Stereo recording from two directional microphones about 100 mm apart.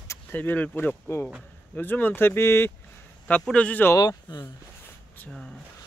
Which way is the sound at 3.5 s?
15° left (ahead or behind).